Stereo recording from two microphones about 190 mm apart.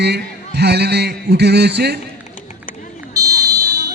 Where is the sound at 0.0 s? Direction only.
60° right (ahead or behind).